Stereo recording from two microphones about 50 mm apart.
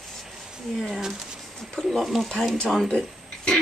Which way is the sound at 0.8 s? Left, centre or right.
Centre.